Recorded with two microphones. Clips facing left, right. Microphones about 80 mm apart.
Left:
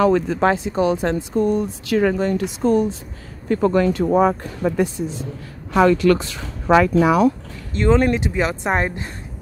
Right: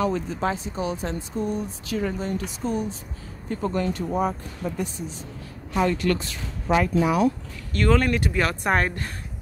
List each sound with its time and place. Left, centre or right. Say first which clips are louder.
0.0 s speech: left 8 dB; left
3.4 s speech: left 9 dB; left
7.7 s speech: left 5 dB; left